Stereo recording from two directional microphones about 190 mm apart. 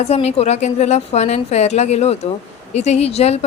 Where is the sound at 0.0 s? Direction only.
35° left (ahead or behind).